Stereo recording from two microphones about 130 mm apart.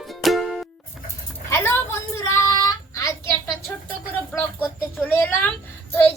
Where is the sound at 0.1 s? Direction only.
Centre (ahead or behind).